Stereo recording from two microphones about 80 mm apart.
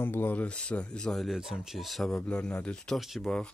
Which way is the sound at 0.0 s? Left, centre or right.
Left.